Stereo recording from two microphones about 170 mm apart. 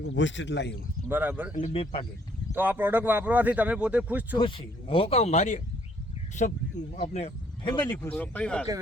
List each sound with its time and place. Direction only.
0.1 s speech: 90° left
1.0 s speech: 10° right (ahead or behind)
1.5 s speech: 35° left (ahead or behind)
2.5 s speech: 10° right (ahead or behind)
4.4 s speech: 30° left (ahead or behind)
7.6 s speech: 25° left (ahead or behind)
7.9 s speech: 10° left (ahead or behind)